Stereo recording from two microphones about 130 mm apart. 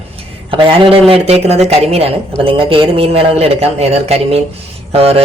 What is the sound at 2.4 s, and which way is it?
Speech, 45° right (ahead or behind).